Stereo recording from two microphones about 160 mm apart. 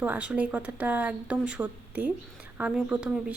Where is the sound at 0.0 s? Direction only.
10° right (ahead or behind).